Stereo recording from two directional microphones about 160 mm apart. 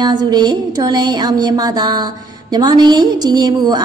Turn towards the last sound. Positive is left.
turn(degrees=-25)  # may be behind; listen again after turning